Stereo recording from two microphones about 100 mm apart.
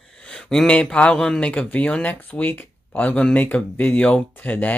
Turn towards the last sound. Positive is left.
turn(degrees=15)  # may be behind; listen again after turning